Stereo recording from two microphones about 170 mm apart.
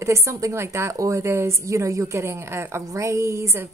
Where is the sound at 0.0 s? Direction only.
15° right (ahead or behind).